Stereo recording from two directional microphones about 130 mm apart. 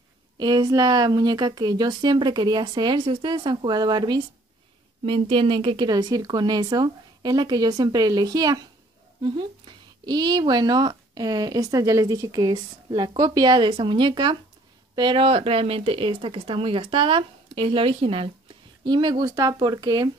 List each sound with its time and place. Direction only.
0.4 s speech: 35° right (ahead or behind)